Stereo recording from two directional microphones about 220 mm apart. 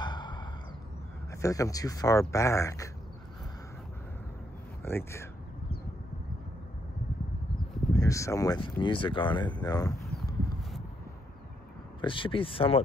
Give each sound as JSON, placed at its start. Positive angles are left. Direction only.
{"t": 0.0, "sound": "a sound", "side_deg": 20}
{"t": 1.3, "sound": "speech", "side_deg": 15}
{"t": 4.8, "sound": "speech", "side_deg": 10}
{"t": 7.9, "sound": "speech", "side_deg": 15}
{"t": 12.0, "sound": "speech", "side_deg": 25}